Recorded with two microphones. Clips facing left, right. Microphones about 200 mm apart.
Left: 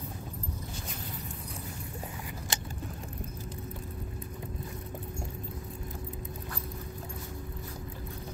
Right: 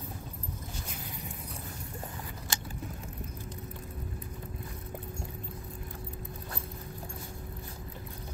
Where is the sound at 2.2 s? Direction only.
15° left (ahead or behind).